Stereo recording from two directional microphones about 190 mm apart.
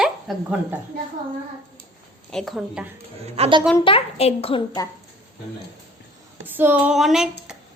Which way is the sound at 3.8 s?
30° left (ahead or behind).